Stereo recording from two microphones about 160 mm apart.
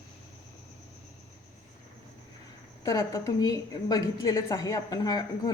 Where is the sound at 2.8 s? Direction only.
20° left (ahead or behind).